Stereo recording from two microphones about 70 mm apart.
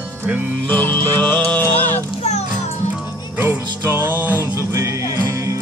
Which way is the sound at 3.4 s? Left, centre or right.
Right.